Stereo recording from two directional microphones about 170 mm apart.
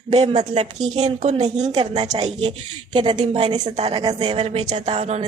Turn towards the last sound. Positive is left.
turn(degrees=-40)  # may be behind; listen again after turning